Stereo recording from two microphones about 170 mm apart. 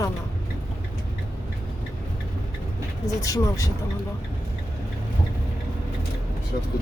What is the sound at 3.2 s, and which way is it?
Speech, 20° left (ahead or behind).